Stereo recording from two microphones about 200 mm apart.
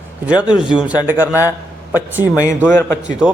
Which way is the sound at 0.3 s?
5° right (ahead or behind).